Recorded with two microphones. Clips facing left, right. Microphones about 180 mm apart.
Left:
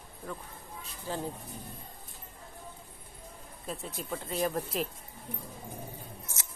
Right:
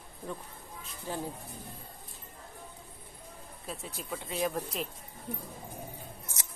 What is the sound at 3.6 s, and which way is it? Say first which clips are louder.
Speech: left 3 dB; centre (ahead or behind).